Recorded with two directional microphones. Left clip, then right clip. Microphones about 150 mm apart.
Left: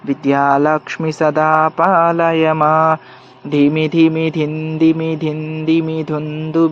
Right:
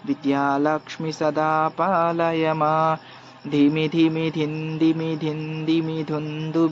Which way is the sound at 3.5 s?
45° left (ahead or behind).